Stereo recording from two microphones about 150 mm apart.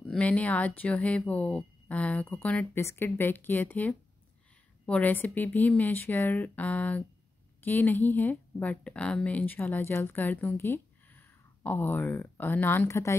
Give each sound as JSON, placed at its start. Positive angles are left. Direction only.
{"t": 0.0, "sound": "speech", "side_deg": 10}